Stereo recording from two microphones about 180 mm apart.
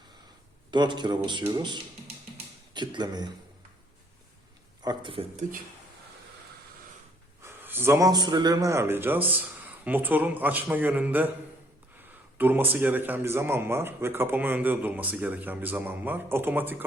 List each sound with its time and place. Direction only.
0.7 s a man's voice: 25° right (ahead or behind)
4.8 s speech: 25° right (ahead or behind)
7.4 s a man's voice: 10° right (ahead or behind)
12.4 s a man's voice: 10° right (ahead or behind)